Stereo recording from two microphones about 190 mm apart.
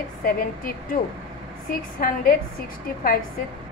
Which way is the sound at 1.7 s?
50° left (ahead or behind).